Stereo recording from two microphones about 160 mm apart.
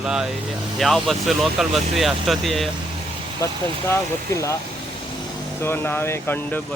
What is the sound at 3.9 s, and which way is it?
Speech, 20° left (ahead or behind).